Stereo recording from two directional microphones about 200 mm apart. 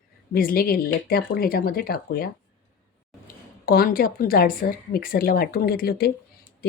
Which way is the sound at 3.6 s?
45° left (ahead or behind).